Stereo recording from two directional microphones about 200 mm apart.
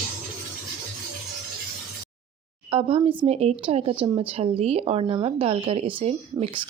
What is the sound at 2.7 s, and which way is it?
Speech, 30° right (ahead or behind).